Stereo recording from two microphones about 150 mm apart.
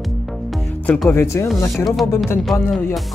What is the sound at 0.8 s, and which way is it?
Speech, 10° left (ahead or behind).